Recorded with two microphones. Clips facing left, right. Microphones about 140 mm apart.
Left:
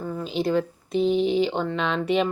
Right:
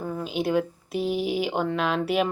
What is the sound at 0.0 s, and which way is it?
Speech, 5° right (ahead or behind).